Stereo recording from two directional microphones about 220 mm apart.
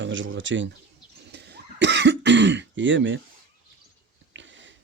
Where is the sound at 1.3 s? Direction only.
50° right (ahead or behind).